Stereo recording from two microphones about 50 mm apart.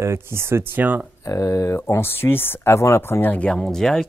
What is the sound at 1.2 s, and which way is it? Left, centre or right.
Speech, left.